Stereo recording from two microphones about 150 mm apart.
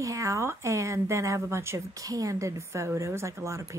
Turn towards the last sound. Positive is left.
turn(degrees=-20)  # may be behind; listen again after turning